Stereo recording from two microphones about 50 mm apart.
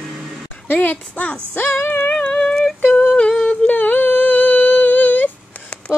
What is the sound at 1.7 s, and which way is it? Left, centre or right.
Music, left.